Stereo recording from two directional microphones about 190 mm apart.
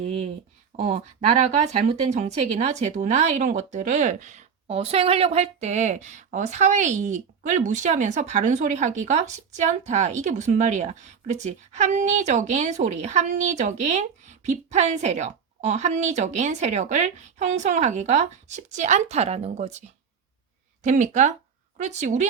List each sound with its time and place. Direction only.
0.0 s a woman's voice: 35° right (ahead or behind)
20.8 s a woman's voice: 40° right (ahead or behind)